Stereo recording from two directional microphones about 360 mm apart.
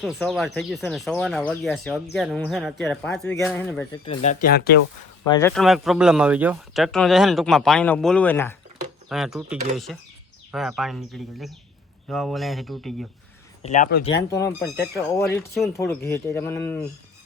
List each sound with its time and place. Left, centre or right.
0.0 s speech: centre; by 4.8 s left
5.2 s speech: centre
13.6 s speech: centre
14.3 s speech: centre